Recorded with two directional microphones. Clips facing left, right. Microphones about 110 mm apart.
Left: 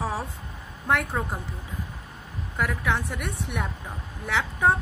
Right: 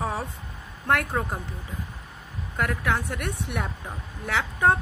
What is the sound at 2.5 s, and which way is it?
Speech, centre (ahead or behind).